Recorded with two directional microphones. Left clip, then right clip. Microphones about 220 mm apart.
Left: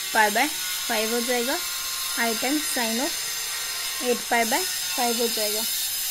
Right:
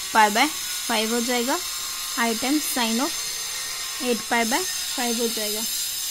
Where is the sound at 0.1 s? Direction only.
50° right (ahead or behind).